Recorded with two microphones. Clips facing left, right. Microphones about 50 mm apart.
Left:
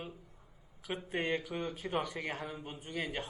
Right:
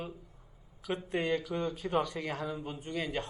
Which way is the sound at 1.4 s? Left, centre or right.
Centre.